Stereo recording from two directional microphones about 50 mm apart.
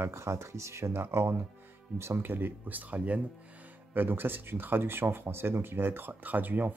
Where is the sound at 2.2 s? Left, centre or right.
Right.